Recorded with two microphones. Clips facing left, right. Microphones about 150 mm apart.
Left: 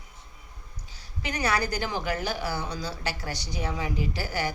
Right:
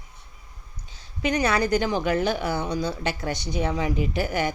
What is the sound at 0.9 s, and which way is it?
A woman's voice, 20° right (ahead or behind).